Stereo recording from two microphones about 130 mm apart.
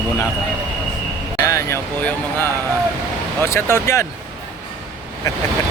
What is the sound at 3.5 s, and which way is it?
Speech, 20° left (ahead or behind).